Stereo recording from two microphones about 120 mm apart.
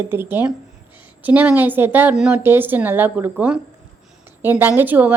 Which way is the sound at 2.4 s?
15° right (ahead or behind).